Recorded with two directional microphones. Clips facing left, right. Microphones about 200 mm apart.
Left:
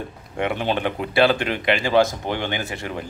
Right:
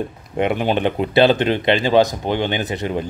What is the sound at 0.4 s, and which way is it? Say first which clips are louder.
Speech: right 5 dB; 15° right (ahead or behind).